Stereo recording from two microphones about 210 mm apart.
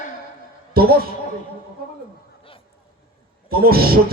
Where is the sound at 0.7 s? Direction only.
45° right (ahead or behind).